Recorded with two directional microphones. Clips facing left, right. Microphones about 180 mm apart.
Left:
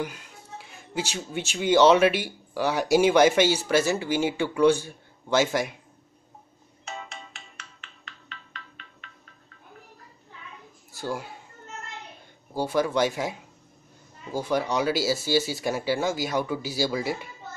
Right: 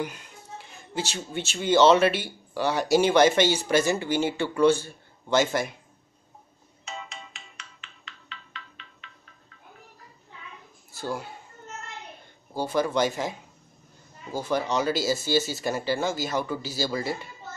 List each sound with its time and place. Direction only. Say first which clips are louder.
0.7 s speech: left 1 dB; 10° left (ahead or behind)
6.8 s music: left 1 dB; 55° left (ahead or behind)
11.0 s speech: even; 15° left (ahead or behind)
12.5 s speech: left 1 dB; 10° left (ahead or behind)